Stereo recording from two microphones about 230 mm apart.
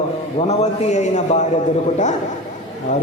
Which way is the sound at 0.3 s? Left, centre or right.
Left.